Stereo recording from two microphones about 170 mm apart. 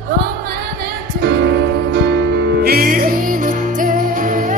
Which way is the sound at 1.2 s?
65° right (ahead or behind).